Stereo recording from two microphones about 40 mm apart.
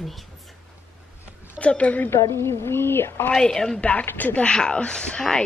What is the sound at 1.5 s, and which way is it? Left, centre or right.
Speech, left.